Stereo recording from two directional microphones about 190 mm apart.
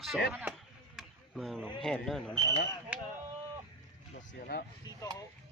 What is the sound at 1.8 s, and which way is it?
Speech, centre (ahead or behind).